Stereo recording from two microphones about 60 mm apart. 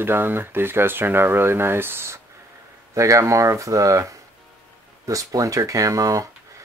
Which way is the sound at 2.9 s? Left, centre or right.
Right.